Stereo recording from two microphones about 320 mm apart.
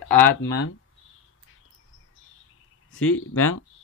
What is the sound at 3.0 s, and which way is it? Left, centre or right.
Speech, left.